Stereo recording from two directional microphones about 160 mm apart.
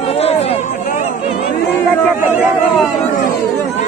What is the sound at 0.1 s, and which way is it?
Chatter, 40° left (ahead or behind).